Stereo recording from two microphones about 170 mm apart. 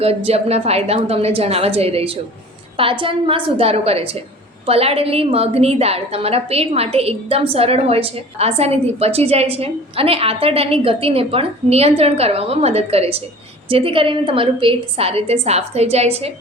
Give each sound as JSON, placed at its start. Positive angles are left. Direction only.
{"t": 0.3, "sound": "a woman's voice", "side_deg": -35}